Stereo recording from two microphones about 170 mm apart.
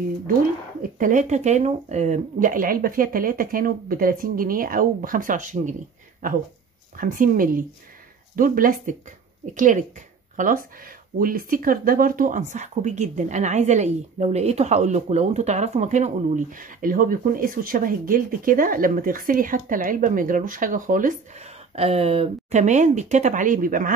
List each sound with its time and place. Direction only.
0.9 s speech: 50° right (ahead or behind)
7.0 s speech: 55° right (ahead or behind)